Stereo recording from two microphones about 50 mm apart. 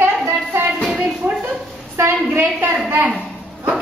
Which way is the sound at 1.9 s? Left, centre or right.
Right.